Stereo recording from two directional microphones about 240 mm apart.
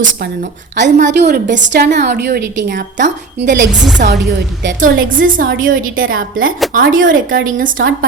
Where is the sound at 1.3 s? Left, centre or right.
Right.